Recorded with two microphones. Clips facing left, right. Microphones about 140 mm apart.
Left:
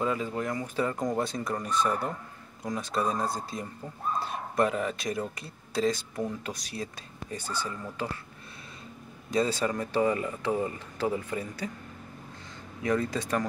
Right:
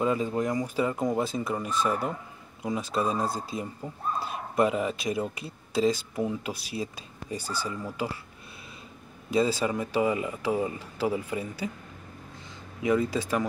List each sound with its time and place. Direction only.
0.0 s speech: 20° right (ahead or behind)
0.7 s speech: 10° right (ahead or behind)
9.3 s speech: 5° right (ahead or behind)
12.8 s speech: 10° right (ahead or behind)